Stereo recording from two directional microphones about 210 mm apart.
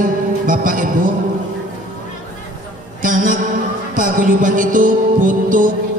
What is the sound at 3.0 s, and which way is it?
Music, 40° right (ahead or behind).